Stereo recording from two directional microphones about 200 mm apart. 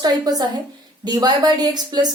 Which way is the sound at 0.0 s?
20° right (ahead or behind).